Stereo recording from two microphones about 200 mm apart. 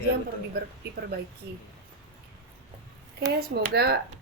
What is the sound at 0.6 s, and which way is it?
Speech, 55° right (ahead or behind).